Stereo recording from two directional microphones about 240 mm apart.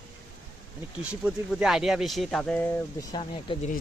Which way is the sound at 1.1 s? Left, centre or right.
Centre.